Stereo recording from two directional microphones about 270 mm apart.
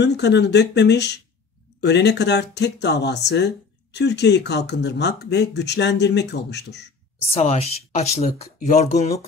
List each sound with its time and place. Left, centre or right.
0.0 s speech: left
7.3 s speech: left